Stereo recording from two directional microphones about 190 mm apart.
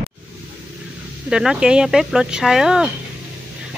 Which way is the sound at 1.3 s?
5° right (ahead or behind).